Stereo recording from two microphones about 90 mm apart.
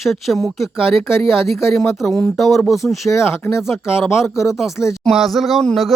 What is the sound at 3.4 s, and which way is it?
Speech, 30° left (ahead or behind).